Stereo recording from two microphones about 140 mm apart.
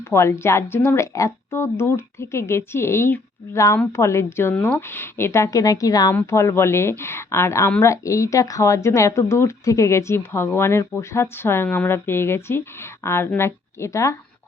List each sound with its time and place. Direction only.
0.1 s speech: 20° left (ahead or behind)